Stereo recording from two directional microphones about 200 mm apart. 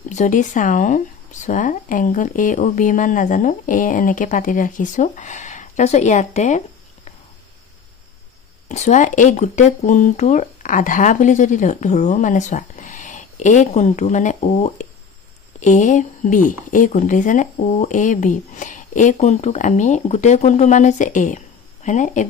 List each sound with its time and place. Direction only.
0.1 s speech: 35° left (ahead or behind)
8.6 s speech: 35° left (ahead or behind)